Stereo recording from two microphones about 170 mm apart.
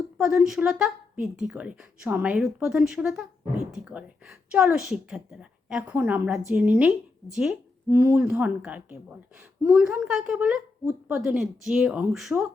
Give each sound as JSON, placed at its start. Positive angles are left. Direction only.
{"t": 0.2, "sound": "a woman's voice", "side_deg": -5}
{"t": 7.9, "sound": "speech", "side_deg": -20}
{"t": 8.1, "sound": "a woman's voice", "side_deg": -5}